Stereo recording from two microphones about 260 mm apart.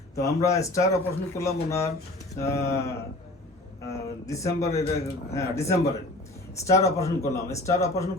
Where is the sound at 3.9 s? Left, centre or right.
Centre.